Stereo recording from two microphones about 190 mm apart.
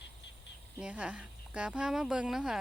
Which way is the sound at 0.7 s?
5° right (ahead or behind).